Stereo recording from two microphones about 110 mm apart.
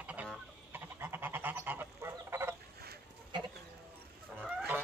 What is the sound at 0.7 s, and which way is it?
Goose, 20° right (ahead or behind).